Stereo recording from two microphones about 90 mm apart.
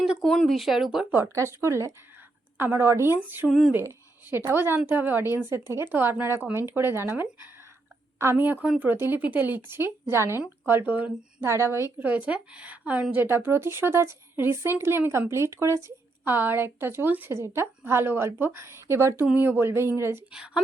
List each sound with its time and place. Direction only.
0.2 s speech: 5° left (ahead or behind)
1.1 s a woman's voice: 30° right (ahead or behind)
11.4 s a woman's voice: 30° right (ahead or behind); by 13.2 s 15° right (ahead or behind)
13.2 s speech: 25° right (ahead or behind)
20.3 s a woman's voice: 10° right (ahead or behind)